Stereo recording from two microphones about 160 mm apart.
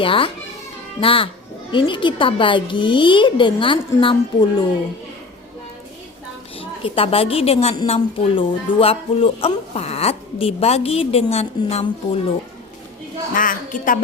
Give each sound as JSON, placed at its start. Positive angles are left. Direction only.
{"t": 0.0, "sound": "speech", "side_deg": 35}
{"t": 6.6, "sound": "a woman's voice", "side_deg": 35}
{"t": 13.3, "sound": "a woman's voice", "side_deg": 55}